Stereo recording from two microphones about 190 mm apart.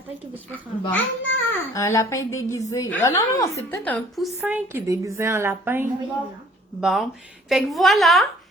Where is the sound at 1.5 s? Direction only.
15° left (ahead or behind); by 5.9 s 10° right (ahead or behind).